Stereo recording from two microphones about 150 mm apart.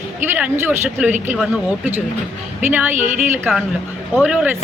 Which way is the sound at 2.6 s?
10° right (ahead or behind).